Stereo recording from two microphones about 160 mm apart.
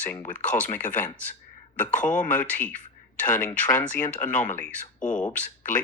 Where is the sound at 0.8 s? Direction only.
55° left (ahead or behind).